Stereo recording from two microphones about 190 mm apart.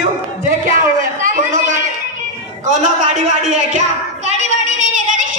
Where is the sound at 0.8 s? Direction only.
45° right (ahead or behind).